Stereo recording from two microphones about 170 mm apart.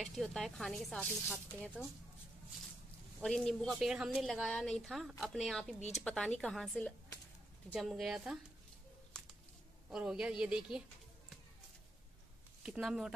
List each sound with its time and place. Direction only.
0.0 s speech: centre (ahead or behind)
3.2 s speech: centre (ahead or behind)
9.8 s speech: 5° right (ahead or behind)
12.6 s speech: 5° right (ahead or behind)